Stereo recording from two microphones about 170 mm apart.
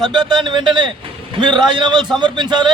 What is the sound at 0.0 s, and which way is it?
A man's voice, 25° right (ahead or behind).